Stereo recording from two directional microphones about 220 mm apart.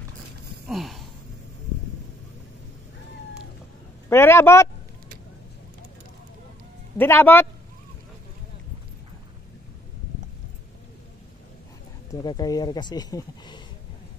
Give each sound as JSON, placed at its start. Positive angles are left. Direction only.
{"t": 0.7, "sound": "a sound", "side_deg": 0}
{"t": 4.1, "sound": "speech", "side_deg": 10}
{"t": 7.0, "sound": "speech", "side_deg": 10}
{"t": 12.1, "sound": "speech", "side_deg": 20}